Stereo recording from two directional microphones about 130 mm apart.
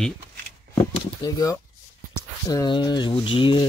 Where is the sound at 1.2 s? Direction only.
30° left (ahead or behind).